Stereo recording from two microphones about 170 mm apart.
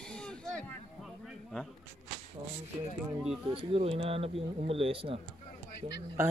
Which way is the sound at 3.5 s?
35° right (ahead or behind).